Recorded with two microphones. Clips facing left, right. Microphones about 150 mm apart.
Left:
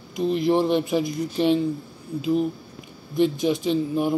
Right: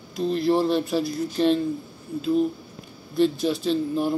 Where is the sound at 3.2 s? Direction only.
15° left (ahead or behind).